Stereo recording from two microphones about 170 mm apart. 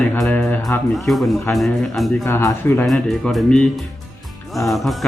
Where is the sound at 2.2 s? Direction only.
15° left (ahead or behind).